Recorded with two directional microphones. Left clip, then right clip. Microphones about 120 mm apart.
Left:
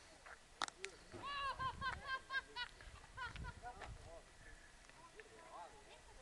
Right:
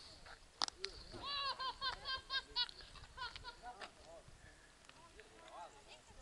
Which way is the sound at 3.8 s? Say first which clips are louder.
Right 2 dB; 90° right.